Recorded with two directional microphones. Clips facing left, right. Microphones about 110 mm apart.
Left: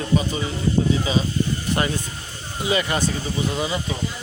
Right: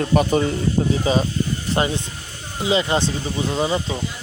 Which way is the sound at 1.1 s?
40° right (ahead or behind).